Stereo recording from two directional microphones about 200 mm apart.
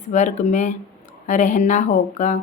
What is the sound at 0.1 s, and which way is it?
Speech, 35° left (ahead or behind).